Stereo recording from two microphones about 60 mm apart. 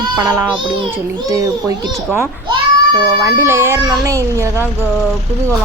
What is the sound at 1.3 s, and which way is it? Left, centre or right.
Speech, right.